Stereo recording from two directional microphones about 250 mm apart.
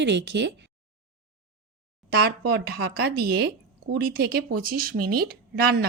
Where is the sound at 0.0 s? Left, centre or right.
Right.